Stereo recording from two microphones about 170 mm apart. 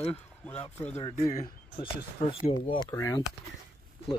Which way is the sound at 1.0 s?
25° left (ahead or behind).